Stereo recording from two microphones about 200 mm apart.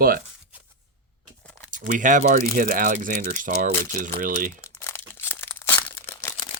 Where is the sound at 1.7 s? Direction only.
40° right (ahead or behind).